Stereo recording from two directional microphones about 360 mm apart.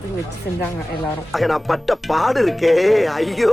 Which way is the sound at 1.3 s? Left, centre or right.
Centre.